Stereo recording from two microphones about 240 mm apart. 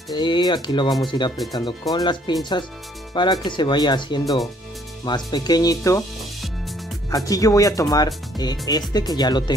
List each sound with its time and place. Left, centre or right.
0.1 s speech: centre
7.2 s speech: centre